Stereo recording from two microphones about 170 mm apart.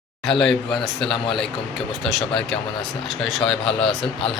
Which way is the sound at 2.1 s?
5° left (ahead or behind).